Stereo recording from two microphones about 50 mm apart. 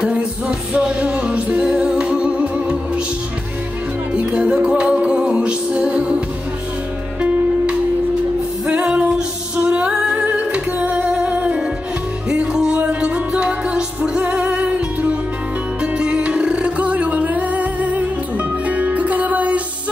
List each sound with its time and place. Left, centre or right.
0.0 s music: centre
4.1 s music: right